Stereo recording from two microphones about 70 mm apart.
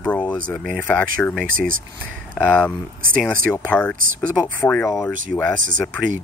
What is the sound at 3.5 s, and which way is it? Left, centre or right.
Speech, left.